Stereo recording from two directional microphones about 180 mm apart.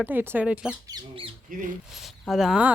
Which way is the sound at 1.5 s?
50° right (ahead or behind).